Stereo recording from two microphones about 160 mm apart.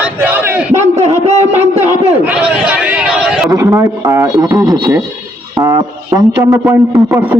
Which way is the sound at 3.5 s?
20° right (ahead or behind).